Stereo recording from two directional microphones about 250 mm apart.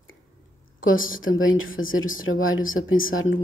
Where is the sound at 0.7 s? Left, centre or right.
Left.